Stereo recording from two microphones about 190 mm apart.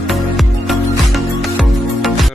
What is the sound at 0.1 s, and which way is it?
Music, centre (ahead or behind).